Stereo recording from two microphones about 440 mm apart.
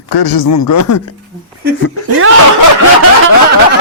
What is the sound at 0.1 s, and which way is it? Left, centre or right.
Speech, left.